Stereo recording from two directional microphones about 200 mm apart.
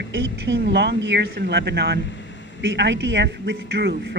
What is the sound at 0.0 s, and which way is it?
A woman's voice, 65° right (ahead or behind).